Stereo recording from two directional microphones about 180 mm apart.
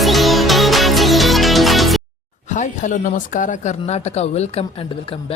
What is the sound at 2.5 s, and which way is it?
A man's voice, 45° left (ahead or behind).